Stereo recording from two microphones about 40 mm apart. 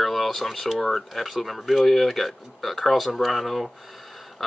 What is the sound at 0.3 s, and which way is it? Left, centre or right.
Speech, centre.